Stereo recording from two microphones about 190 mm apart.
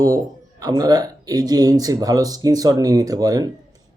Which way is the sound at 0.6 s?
20° right (ahead or behind).